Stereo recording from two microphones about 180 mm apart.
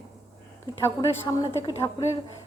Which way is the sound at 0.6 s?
20° left (ahead or behind).